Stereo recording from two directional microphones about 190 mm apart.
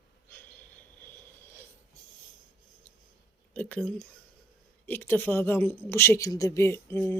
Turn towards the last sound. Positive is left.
turn(degrees=10)  # may be behind; listen again after turning